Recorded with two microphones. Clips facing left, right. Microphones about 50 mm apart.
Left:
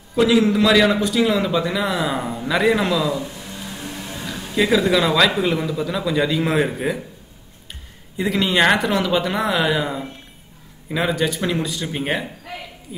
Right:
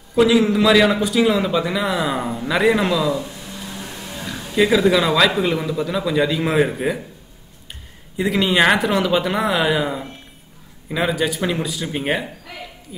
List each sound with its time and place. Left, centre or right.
0.1 s a man's voice: centre
3.9 s music: left
4.3 s a man's voice: centre
8.2 s a man's voice: centre